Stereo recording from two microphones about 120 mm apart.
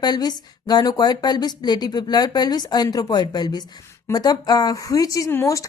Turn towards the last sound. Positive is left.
turn(degrees=25)  # may be behind; listen again after turning